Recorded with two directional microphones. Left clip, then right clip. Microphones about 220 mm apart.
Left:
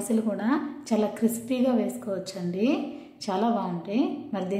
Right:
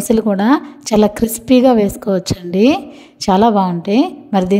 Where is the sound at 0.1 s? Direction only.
45° right (ahead or behind).